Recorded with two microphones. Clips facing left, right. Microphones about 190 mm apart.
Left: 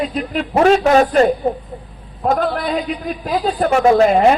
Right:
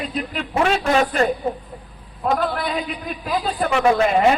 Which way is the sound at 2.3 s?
45° left (ahead or behind).